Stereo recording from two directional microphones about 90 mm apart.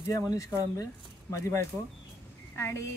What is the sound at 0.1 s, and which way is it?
A woman's voice, 40° left (ahead or behind).